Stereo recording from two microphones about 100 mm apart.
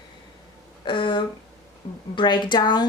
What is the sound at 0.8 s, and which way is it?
Speech, 55° left (ahead or behind).